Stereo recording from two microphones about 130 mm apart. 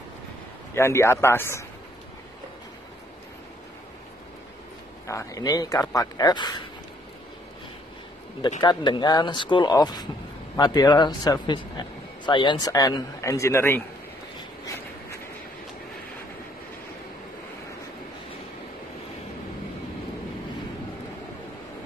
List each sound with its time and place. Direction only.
0.7 s a man's voice: 20° left (ahead or behind)
5.0 s a man's voice: 25° left (ahead or behind)
8.4 s a man's voice: 35° left (ahead or behind); by 13.8 s 20° left (ahead or behind)